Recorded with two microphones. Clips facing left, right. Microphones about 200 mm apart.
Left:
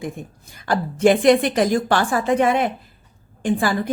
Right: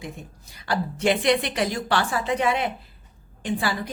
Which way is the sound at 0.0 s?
50° left (ahead or behind).